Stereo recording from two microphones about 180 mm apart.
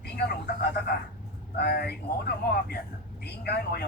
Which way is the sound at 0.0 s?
60° left (ahead or behind).